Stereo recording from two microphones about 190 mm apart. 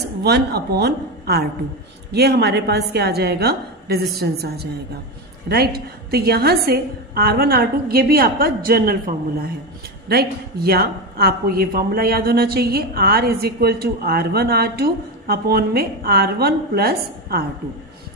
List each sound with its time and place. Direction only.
0.2 s a woman's voice: 60° right (ahead or behind)